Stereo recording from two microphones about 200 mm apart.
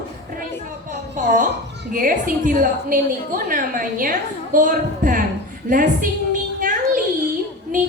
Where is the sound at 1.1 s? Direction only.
40° right (ahead or behind).